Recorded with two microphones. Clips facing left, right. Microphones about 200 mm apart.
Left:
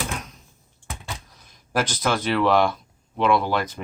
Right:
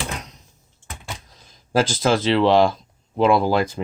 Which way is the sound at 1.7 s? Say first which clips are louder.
Right 5 dB; 30° right (ahead or behind).